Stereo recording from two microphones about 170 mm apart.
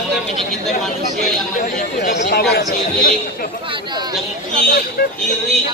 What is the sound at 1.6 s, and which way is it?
Speech, 55° left (ahead or behind).